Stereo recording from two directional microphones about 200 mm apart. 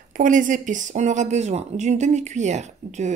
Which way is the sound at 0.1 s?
40° right (ahead or behind).